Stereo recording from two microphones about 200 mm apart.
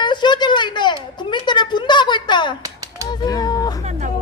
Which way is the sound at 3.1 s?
20° left (ahead or behind).